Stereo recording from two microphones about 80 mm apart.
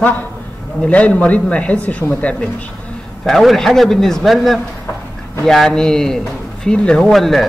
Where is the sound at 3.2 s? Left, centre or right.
Centre.